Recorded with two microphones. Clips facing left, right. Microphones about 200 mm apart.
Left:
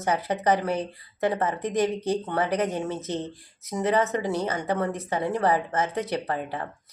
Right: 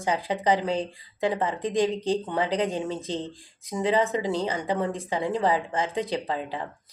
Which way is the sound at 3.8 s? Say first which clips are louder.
Even; 15° right (ahead or behind).